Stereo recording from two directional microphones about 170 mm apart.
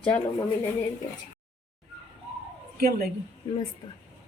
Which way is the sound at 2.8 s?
60° right (ahead or behind).